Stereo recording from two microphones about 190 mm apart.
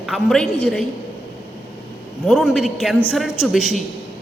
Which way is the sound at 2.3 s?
Centre (ahead or behind).